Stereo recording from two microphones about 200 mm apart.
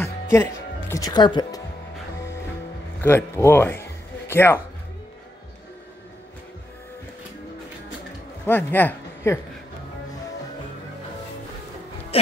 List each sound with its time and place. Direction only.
0.0 s music: 10° left (ahead or behind)
3.0 s speech: 10° left (ahead or behind)
8.5 s speech: 10° left (ahead or behind)